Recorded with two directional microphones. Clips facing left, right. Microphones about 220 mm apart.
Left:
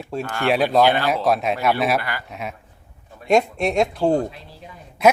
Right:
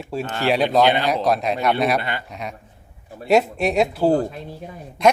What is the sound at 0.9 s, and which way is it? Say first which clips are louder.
Speech: even; 20° right (ahead or behind).